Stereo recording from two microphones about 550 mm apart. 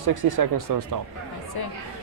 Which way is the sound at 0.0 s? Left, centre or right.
Right.